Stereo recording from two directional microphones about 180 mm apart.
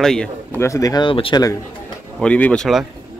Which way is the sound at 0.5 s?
15° left (ahead or behind).